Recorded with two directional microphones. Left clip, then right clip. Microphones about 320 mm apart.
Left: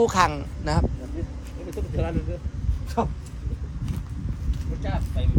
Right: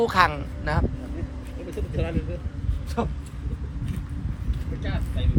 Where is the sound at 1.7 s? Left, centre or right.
Left.